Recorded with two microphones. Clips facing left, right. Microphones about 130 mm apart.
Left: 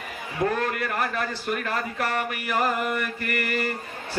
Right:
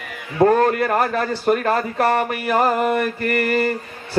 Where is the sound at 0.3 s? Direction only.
45° right (ahead or behind).